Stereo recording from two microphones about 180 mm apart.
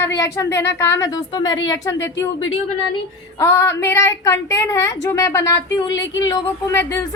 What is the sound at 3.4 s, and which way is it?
A woman's voice, 15° left (ahead or behind).